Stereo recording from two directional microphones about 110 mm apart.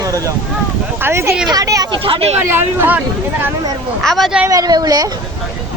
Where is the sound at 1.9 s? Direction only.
55° right (ahead or behind).